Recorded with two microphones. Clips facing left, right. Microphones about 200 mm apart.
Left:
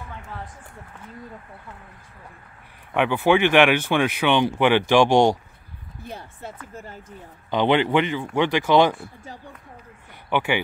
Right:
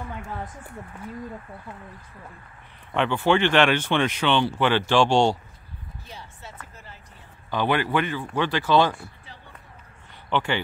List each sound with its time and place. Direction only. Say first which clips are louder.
2.9 s speech: left 2 dB; 10° left (ahead or behind)
6.0 s speech: left 8 dB; 55° left (ahead or behind)
7.5 s speech: left 4 dB; 20° left (ahead or behind)
10.3 s speech: left 2 dB; 10° left (ahead or behind)